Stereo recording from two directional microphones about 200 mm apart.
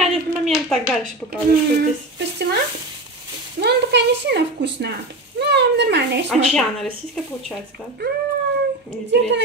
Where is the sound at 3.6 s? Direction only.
55° right (ahead or behind).